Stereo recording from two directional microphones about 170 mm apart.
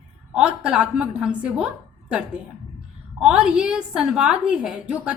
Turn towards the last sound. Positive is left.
turn(degrees=-5)  # may be behind; listen again after turning